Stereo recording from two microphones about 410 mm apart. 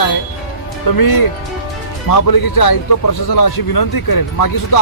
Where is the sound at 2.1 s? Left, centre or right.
Left.